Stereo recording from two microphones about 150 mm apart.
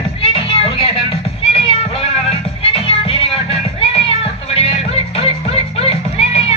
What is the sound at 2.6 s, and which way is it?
Music, 40° left (ahead or behind).